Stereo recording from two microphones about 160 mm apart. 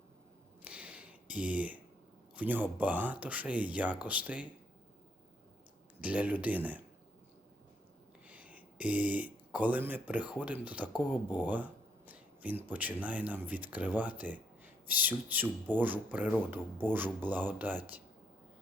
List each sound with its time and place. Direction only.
0.6 s a sound: 10° right (ahead or behind)
2.3 s speech: 10° right (ahead or behind)
6.0 s speech: 10° right (ahead or behind)
8.3 s speech: 10° right (ahead or behind)